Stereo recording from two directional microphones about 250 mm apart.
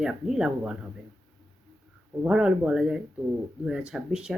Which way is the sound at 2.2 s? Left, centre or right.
Centre.